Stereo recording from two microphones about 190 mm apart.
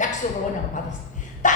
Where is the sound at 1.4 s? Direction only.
40° left (ahead or behind).